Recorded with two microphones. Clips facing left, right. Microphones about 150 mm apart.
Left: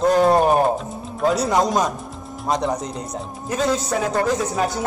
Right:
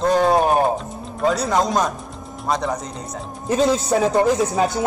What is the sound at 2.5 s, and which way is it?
Speech, 20° left (ahead or behind).